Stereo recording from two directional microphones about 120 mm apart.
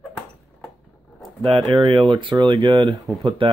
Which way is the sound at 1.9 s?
45° right (ahead or behind).